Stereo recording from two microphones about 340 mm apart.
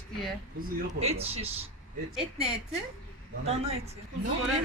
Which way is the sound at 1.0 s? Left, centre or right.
Centre.